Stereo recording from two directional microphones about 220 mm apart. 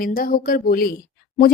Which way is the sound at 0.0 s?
40° left (ahead or behind).